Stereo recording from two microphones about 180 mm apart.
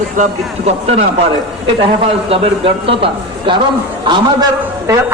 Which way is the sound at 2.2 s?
30° right (ahead or behind).